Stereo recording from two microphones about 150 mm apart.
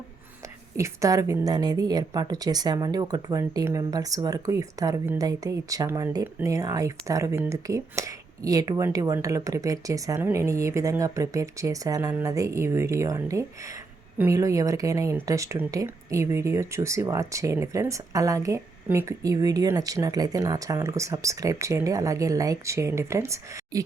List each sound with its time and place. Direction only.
0.8 s speech: 25° right (ahead or behind)